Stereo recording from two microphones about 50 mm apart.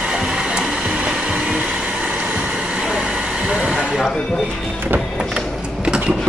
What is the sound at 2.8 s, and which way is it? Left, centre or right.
Vehicle, centre.